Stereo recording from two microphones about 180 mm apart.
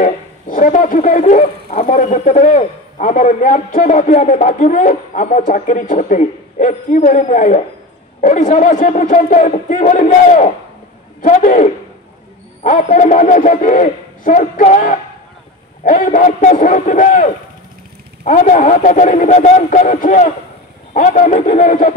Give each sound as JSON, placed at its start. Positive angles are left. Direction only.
{"t": 0.0, "sound": "speech", "side_deg": 45}